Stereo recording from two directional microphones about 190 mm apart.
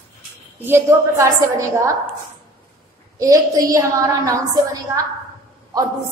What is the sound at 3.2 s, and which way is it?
A woman's voice, 15° right (ahead or behind).